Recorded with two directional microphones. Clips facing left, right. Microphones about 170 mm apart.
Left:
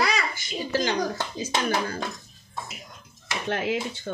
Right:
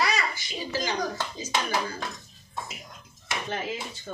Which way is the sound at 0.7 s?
55° left (ahead or behind).